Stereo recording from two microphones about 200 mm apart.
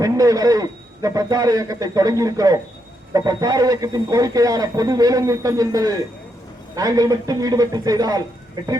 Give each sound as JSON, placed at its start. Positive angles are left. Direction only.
{"t": 0.0, "sound": "speech", "side_deg": -15}